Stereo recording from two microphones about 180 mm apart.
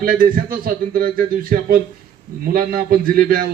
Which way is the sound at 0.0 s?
50° right (ahead or behind).